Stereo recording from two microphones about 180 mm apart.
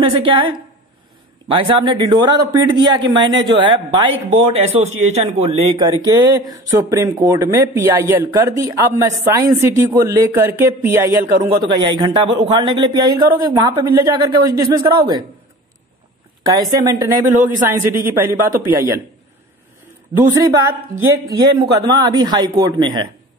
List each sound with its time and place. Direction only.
0.1 s speech: 30° right (ahead or behind); by 11.3 s 15° right (ahead or behind)
11.4 s speech: 25° right (ahead or behind)
16.4 s speech: 20° right (ahead or behind)
20.1 s speech: 25° right (ahead or behind)